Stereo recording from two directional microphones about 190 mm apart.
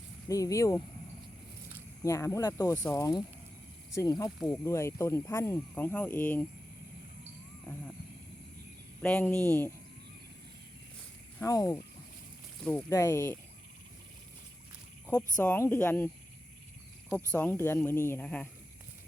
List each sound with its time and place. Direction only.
0.3 s speech: 15° left (ahead or behind)
2.0 s speech: 15° left (ahead or behind)
9.0 s speech: 10° left (ahead or behind)
11.3 s speech: 15° left (ahead or behind)
12.9 s speech: 15° left (ahead or behind)
15.4 s speech: 15° left (ahead or behind)
17.3 s speech: 10° left (ahead or behind)